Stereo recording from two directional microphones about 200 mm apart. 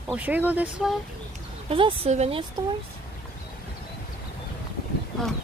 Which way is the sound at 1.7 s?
30° right (ahead or behind).